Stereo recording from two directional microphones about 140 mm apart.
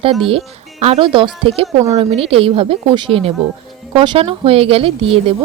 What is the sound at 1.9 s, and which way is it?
Speech, 50° right (ahead or behind).